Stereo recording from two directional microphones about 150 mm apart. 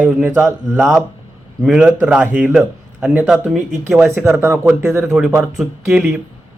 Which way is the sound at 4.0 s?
15° right (ahead or behind).